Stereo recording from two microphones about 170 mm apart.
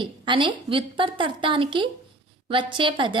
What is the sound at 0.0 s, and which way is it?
A woman's voice, 30° right (ahead or behind).